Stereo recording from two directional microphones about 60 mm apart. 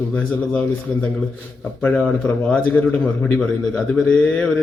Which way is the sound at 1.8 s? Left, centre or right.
Left.